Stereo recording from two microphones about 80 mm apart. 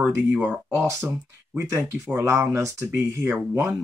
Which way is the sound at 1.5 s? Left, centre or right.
Right.